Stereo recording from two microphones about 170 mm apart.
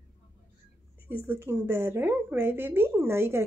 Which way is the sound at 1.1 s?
15° right (ahead or behind).